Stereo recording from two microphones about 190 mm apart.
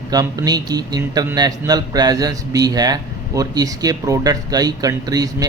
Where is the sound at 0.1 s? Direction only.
20° right (ahead or behind).